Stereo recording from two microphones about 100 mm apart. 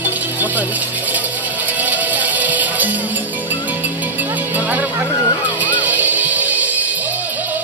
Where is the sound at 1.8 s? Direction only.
15° right (ahead or behind).